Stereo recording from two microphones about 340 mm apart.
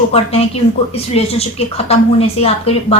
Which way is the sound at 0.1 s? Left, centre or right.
Centre.